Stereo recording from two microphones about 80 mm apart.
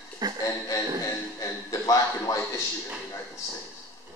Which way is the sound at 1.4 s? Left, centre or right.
Left.